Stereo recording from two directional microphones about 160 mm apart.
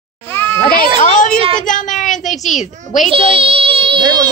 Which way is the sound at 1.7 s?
55° left (ahead or behind).